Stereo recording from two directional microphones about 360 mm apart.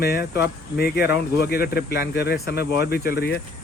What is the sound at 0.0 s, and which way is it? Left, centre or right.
Speech, left.